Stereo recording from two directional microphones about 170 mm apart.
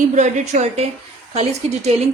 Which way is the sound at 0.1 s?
45° right (ahead or behind).